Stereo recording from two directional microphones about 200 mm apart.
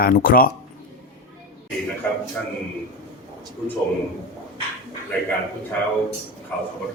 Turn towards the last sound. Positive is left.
turn(degrees=5)  # may be behind; listen again after turning